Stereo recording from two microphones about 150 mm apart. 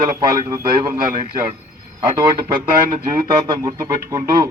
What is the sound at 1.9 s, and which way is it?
Speech, 25° right (ahead or behind).